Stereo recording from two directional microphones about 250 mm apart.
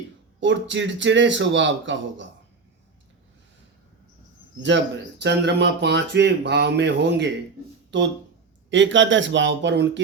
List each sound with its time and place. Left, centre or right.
0.3 s speech: right
4.7 s speech: right